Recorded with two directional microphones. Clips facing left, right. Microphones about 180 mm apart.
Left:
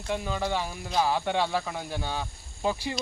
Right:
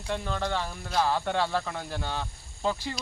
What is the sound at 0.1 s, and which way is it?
Speech, 5° left (ahead or behind).